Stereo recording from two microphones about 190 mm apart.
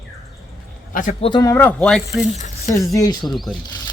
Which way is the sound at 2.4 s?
40° left (ahead or behind).